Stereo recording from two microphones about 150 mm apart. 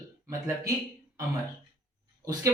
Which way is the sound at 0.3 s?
20° right (ahead or behind).